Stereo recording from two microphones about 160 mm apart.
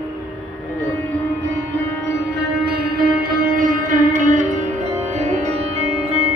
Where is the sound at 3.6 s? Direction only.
55° right (ahead or behind).